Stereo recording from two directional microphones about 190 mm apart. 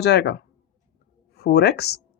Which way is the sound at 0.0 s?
60° left (ahead or behind).